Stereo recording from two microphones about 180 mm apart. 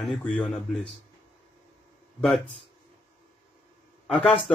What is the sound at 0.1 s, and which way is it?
Speech, 5° left (ahead or behind).